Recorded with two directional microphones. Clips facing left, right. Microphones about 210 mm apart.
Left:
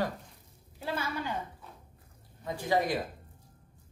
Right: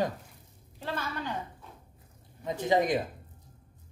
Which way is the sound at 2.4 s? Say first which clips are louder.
Right 3 dB; 20° right (ahead or behind).